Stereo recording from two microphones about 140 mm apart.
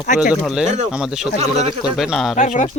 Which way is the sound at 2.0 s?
Centre (ahead or behind).